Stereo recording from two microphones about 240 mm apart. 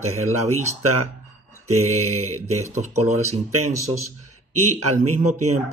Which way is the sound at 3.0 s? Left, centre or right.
Right.